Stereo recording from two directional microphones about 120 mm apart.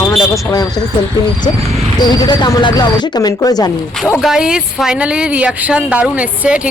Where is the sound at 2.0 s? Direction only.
35° left (ahead or behind).